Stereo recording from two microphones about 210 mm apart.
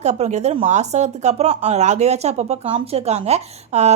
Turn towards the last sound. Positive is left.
turn(degrees=-30)  # may be behind; listen again after turning